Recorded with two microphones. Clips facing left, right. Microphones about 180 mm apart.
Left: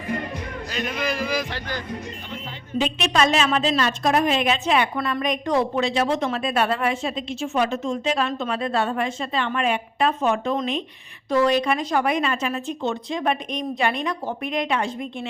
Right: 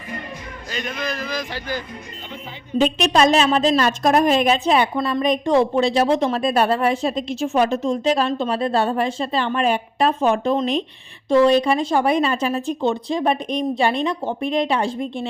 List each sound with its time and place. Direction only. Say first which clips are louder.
0.7 s a man's voice: even; 5° left (ahead or behind)
1.5 s speech: right 3 dB; 5° right (ahead or behind)
2.7 s speech: right 5 dB; 40° right (ahead or behind)